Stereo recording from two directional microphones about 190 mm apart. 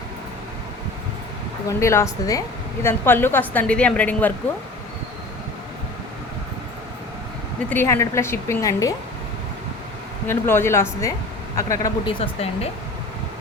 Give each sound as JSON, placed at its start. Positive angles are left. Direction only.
{"t": 1.6, "sound": "a woman's voice", "side_deg": 15}
{"t": 7.7, "sound": "a woman's voice", "side_deg": 15}
{"t": 10.2, "sound": "a woman's voice", "side_deg": 10}